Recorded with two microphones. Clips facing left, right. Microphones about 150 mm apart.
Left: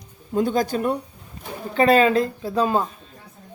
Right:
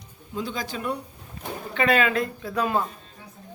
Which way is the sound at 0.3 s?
50° left (ahead or behind).